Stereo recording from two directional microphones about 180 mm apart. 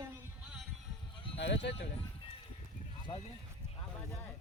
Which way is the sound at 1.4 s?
75° left (ahead or behind).